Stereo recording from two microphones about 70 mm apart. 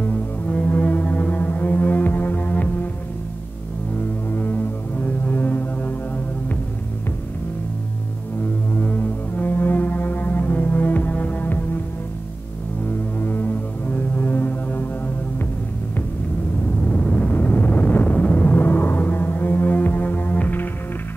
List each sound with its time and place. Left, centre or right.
0.1 s music: centre
4.3 s music: left
8.7 s music: left
13.2 s music: left
16.8 s vehicle: centre